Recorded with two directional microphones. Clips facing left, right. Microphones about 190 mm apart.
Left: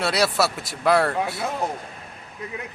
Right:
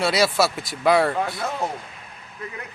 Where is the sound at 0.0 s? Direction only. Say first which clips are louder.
Right 2 dB; centre (ahead or behind).